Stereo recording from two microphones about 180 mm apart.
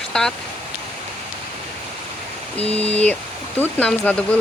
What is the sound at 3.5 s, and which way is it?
Speech, 10° left (ahead or behind).